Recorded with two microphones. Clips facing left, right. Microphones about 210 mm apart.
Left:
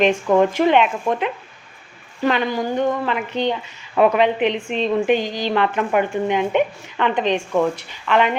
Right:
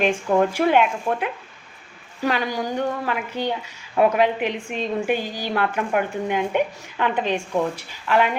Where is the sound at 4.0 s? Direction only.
70° left (ahead or behind).